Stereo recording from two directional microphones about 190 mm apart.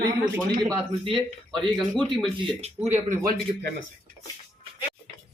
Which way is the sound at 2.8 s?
15° right (ahead or behind).